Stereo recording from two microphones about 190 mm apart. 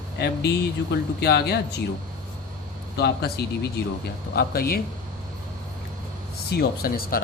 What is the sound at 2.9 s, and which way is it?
Speech, 60° left (ahead or behind).